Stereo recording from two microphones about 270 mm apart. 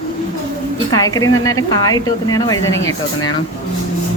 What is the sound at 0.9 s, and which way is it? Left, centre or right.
Speech, centre.